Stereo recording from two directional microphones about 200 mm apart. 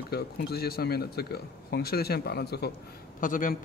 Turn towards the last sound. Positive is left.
turn(degrees=40)  # may be behind; listen again after turning